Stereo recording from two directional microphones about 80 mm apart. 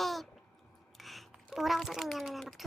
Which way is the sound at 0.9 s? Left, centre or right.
Centre.